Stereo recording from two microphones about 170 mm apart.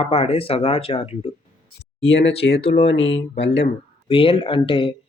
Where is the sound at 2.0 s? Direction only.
90° left.